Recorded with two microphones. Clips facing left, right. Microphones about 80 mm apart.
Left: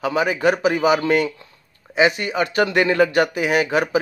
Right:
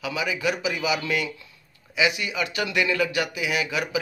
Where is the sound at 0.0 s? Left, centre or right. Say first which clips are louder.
Left 8 dB; left.